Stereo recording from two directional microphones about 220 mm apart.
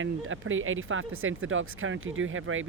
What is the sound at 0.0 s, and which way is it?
Speech, 65° right (ahead or behind).